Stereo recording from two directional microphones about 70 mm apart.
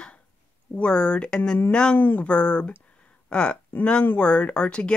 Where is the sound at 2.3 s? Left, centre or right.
Centre.